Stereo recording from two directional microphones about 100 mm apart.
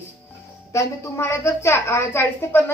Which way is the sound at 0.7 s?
30° left (ahead or behind).